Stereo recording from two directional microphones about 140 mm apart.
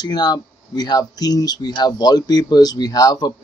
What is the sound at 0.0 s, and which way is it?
Speech, 30° left (ahead or behind).